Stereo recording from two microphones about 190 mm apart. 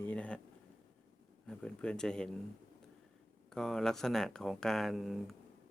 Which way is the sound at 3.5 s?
5° left (ahead or behind).